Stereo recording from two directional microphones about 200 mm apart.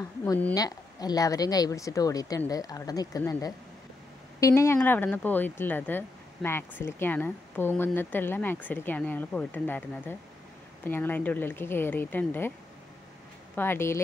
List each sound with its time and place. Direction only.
0.2 s speech: 10° left (ahead or behind)
13.6 s speech: 10° left (ahead or behind)